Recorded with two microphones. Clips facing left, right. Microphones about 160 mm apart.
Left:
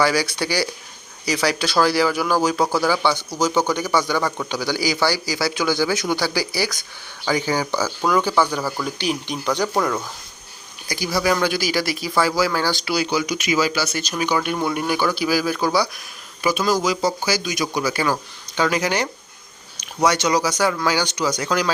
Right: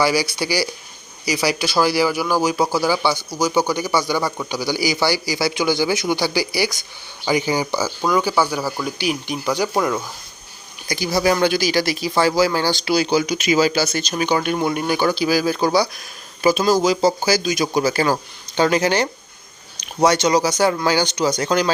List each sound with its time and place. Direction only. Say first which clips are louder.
0.0 s speech: right 1 dB; 10° right (ahead or behind)
3.2 s a man's voice: right 1 dB; 25° left (ahead or behind)
3.7 s speech: even; 10° right (ahead or behind)
6.3 s speech: right 2 dB; 45° left (ahead or behind)
7.3 s speech: right 2 dB; 15° right (ahead or behind)
10.9 s speech: right 2 dB; 25° right (ahead or behind)